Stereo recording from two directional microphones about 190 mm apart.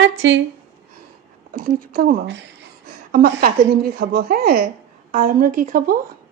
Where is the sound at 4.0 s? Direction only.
55° right (ahead or behind).